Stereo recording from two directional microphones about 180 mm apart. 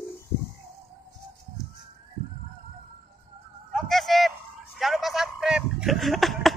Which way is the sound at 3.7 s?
Centre (ahead or behind).